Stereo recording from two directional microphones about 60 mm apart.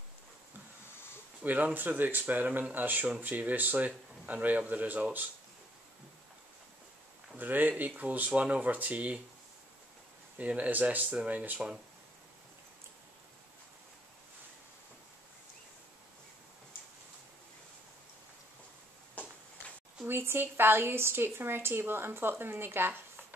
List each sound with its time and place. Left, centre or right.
1.4 s a woman's voice: right
7.3 s speech: right
10.3 s speech: right
20.1 s a woman's voice: right